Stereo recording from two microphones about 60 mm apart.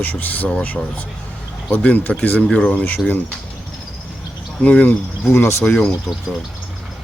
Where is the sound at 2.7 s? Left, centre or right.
Left.